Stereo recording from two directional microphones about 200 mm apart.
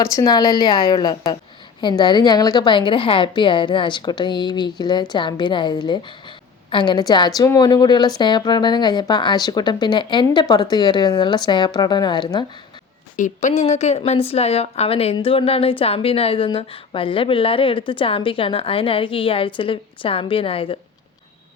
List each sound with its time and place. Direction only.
0.0 s a woman's voice: 20° left (ahead or behind)
13.1 s a woman's voice: 40° left (ahead or behind)